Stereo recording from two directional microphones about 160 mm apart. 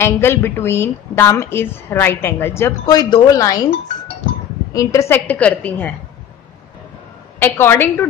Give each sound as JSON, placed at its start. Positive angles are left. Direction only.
{"t": 0.0, "sound": "a woman's voice", "side_deg": 15}
{"t": 4.7, "sound": "a woman's voice", "side_deg": 20}
{"t": 7.3, "sound": "a woman's voice", "side_deg": 15}